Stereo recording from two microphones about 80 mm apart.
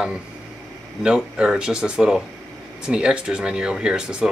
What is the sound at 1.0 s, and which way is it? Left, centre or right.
Speech, centre.